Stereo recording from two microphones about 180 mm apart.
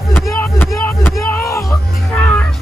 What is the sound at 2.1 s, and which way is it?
Music, 5° left (ahead or behind).